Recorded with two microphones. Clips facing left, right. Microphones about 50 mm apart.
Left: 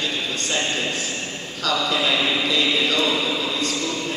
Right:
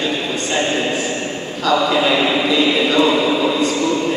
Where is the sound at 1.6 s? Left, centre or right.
Right.